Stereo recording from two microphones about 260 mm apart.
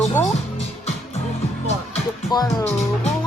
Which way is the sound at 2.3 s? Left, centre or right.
Centre.